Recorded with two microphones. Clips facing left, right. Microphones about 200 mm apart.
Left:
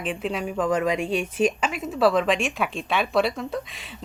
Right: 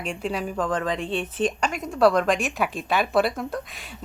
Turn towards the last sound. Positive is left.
turn(degrees=0)  # may be behind; listen again after turning